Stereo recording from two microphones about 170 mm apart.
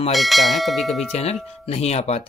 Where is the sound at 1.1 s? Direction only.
40° left (ahead or behind).